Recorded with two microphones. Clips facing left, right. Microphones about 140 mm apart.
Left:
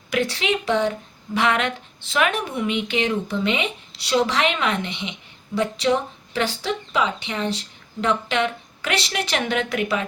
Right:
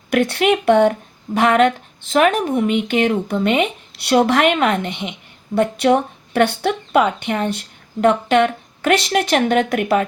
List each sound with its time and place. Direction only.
0.1 s speech: 55° right (ahead or behind)